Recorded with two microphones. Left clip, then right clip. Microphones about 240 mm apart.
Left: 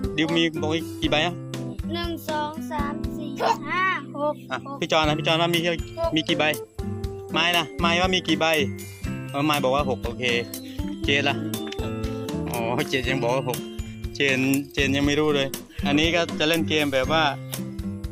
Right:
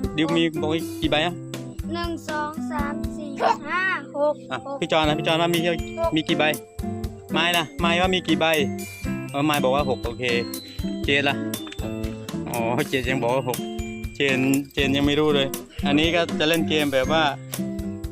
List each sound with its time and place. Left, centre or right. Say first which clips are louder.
0.0 s speech: right 1 dB; centre
3.3 s speech: right 2 dB; centre
3.7 s a sound: even; right
4.8 s speech: right 1 dB; centre
11.0 s music: right 1 dB; centre
12.3 s speech: right 2 dB; centre